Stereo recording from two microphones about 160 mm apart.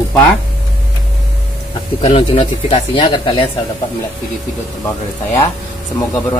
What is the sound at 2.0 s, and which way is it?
Speech, 40° left (ahead or behind).